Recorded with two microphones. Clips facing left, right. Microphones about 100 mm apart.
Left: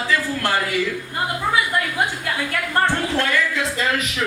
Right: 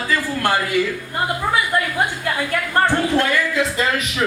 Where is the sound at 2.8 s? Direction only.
15° right (ahead or behind).